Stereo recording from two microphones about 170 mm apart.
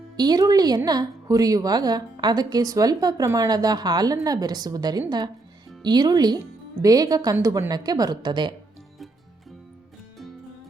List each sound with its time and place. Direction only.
0.2 s a woman's voice: 25° right (ahead or behind)